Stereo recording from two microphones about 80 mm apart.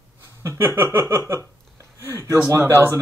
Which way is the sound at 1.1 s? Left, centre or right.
Right.